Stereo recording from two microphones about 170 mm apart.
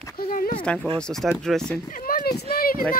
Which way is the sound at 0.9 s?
5° left (ahead or behind).